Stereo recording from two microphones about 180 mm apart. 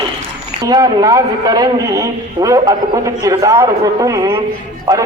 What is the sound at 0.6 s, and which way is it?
A man's voice, 20° right (ahead or behind).